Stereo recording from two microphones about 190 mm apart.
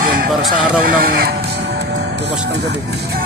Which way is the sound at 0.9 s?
50° right (ahead or behind).